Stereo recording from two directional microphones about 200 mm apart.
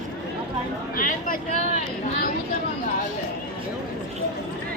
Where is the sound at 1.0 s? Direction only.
45° left (ahead or behind).